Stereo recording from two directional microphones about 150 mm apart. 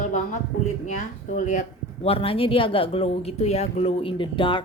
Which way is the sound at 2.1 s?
40° left (ahead or behind).